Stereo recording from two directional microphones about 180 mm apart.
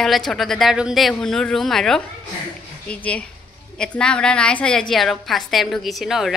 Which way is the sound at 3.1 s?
5° left (ahead or behind).